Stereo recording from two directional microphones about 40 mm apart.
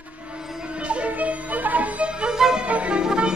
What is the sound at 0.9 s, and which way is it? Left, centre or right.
Music, right.